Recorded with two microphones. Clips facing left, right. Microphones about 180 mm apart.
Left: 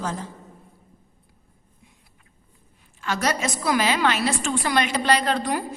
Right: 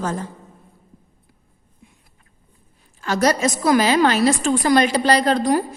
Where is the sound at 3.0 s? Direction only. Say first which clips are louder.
Right 7 dB; 40° right (ahead or behind).